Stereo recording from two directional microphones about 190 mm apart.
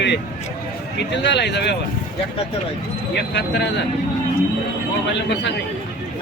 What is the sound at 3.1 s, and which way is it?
Speech, 65° left (ahead or behind).